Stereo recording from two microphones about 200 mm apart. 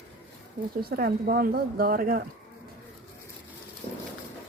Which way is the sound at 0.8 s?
50° right (ahead or behind).